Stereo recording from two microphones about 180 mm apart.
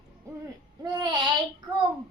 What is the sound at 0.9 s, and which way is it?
Child singing, 25° right (ahead or behind).